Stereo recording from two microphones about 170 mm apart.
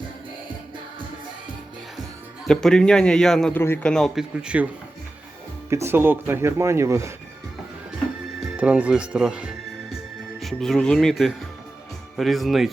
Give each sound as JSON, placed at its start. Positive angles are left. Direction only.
{"t": 2.5, "sound": "a man's voice", "side_deg": 5}
{"t": 8.4, "sound": "music", "side_deg": -5}
{"t": 10.4, "sound": "a man's voice", "side_deg": 0}